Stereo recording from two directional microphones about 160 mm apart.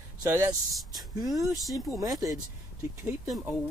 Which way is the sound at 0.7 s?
Centre (ahead or behind).